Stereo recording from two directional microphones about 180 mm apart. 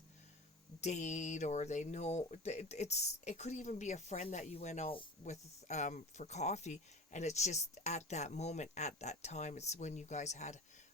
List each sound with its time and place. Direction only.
0.8 s speech: 40° left (ahead or behind)